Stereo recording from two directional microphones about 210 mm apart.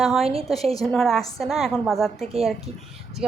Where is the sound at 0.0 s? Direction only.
Centre (ahead or behind).